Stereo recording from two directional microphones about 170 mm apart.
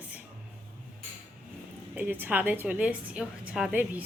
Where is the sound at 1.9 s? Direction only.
10° right (ahead or behind).